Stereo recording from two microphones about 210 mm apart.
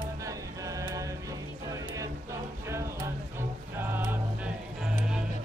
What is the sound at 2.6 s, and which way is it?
Music, 15° right (ahead or behind).